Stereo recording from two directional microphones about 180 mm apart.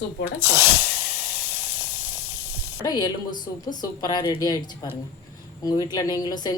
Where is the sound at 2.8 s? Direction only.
20° left (ahead or behind).